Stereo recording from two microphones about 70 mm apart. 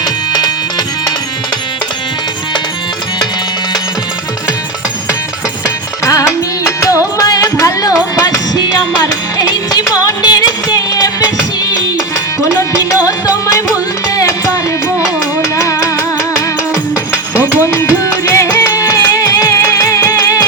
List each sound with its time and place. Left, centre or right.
0.0 s music: left
5.6 s music: left
9.9 s music: left
12.4 s music: left
17.4 s music: left
19.5 s music: left